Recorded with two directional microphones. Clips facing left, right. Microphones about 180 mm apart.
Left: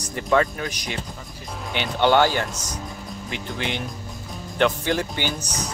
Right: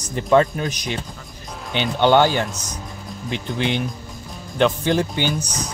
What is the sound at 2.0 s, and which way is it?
Speech, 20° right (ahead or behind).